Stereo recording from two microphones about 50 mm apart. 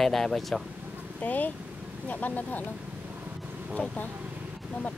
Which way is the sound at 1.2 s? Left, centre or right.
Left.